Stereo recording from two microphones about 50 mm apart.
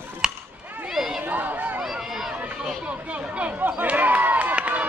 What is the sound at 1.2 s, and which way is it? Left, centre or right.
Speech, right.